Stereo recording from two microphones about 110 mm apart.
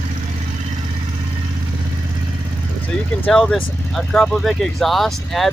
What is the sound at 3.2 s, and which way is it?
Speech, 5° left (ahead or behind).